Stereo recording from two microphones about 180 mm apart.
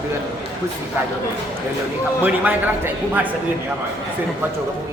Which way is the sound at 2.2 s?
10° right (ahead or behind).